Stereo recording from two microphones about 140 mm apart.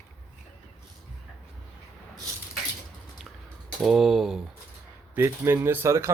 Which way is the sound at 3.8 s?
Centre (ahead or behind).